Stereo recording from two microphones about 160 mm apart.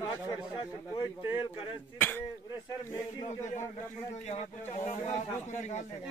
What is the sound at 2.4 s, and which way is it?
Speech, 25° left (ahead or behind).